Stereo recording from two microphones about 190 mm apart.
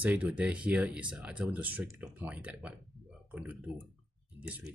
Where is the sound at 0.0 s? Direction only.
10° right (ahead or behind).